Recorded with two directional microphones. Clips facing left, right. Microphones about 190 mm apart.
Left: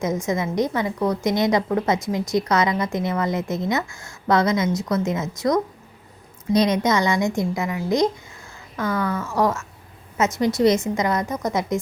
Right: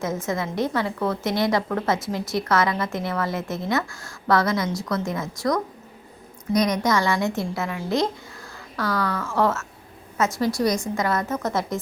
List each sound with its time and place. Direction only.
0.3 s a woman's voice: 15° left (ahead or behind)